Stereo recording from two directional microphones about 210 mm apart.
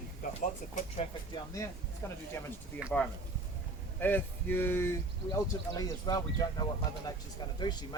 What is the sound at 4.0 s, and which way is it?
Speech, 10° left (ahead or behind).